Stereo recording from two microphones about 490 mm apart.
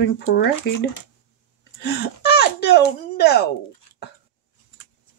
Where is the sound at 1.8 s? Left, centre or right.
Centre.